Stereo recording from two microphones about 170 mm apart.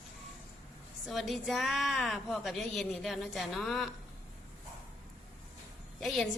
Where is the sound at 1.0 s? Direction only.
Centre (ahead or behind).